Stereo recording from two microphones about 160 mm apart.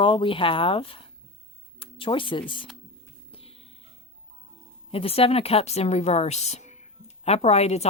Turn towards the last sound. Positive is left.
turn(degrees=40)  # may be behind; listen again after turning